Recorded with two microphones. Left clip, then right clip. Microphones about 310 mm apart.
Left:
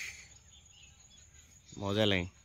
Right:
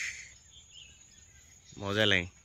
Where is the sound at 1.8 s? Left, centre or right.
Centre.